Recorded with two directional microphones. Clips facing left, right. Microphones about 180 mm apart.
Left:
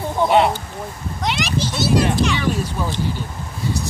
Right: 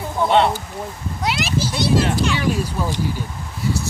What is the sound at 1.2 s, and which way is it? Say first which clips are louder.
A child's voice: even; 5° right (ahead or behind).